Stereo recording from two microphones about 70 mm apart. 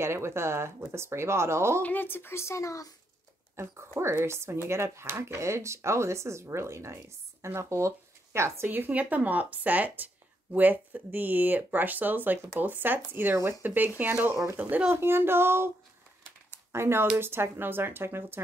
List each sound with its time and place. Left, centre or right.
0.0 s speech: right
1.8 s speech: left
3.5 s speech: right; by 14.9 s centre
14.9 s speech: right
16.7 s speech: right